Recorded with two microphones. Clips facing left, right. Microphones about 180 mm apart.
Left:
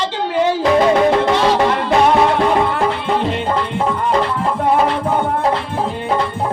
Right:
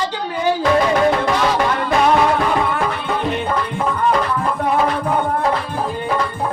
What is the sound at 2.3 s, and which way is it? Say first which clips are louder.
Music: left 3 dB; 25° left (ahead or behind).